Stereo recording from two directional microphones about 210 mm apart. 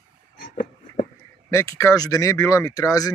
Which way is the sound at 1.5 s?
15° left (ahead or behind).